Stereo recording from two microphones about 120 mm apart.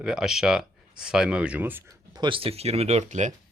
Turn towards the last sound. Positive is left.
turn(degrees=-80)